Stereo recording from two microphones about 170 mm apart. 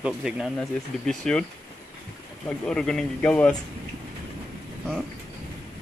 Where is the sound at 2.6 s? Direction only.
5° left (ahead or behind).